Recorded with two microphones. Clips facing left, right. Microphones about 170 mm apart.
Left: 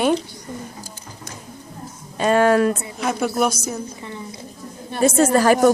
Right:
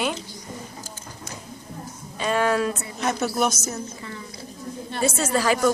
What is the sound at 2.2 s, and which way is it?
Speech, 50° left (ahead or behind).